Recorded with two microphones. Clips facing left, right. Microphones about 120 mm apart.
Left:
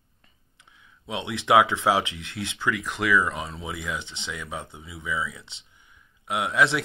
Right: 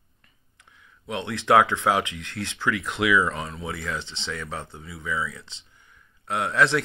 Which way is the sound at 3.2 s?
15° left (ahead or behind).